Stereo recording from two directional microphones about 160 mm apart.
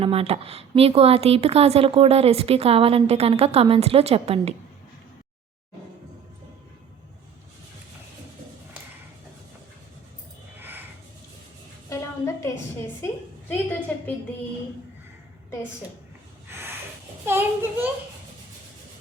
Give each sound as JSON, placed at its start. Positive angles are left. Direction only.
{"t": 0.0, "sound": "speech", "side_deg": -35}
{"t": 11.9, "sound": "a sound", "side_deg": 20}
{"t": 13.0, "sound": "a woman's voice", "side_deg": 15}
{"t": 16.5, "sound": "snort", "side_deg": -15}
{"t": 17.2, "sound": "a child's voice", "side_deg": -15}